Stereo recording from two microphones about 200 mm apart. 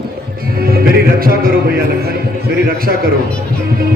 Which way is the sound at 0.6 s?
50° right (ahead or behind).